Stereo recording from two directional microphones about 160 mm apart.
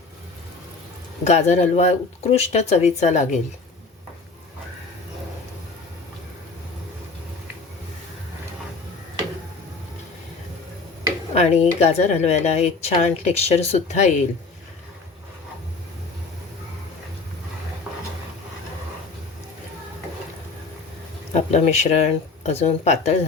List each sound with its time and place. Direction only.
1.2 s speech: 45° left (ahead or behind)
11.3 s speech: 45° left (ahead or behind)
21.3 s speech: 45° left (ahead or behind)